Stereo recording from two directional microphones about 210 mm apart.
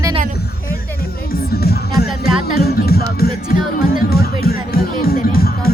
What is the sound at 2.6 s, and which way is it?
Speech, 50° left (ahead or behind).